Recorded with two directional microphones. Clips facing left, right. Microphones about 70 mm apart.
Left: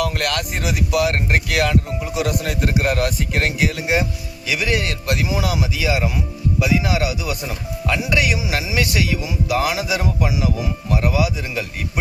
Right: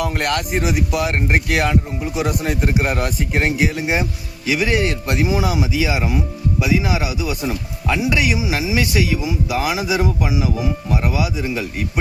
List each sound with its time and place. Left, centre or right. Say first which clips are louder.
0.0 s a man's voice: right 1 dB; right